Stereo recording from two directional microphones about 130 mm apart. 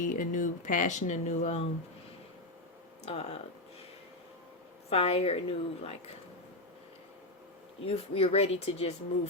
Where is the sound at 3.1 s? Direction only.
50° left (ahead or behind).